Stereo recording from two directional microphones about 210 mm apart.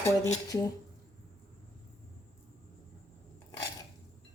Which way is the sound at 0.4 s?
15° left (ahead or behind).